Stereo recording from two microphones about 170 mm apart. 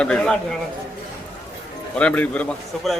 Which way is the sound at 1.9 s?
5° left (ahead or behind).